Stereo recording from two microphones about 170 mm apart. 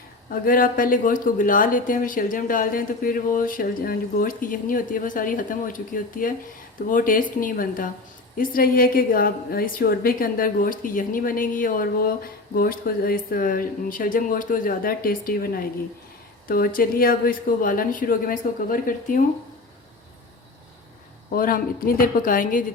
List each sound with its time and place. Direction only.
0.3 s a woman's voice: 55° left (ahead or behind)
21.3 s a woman's voice: 55° left (ahead or behind)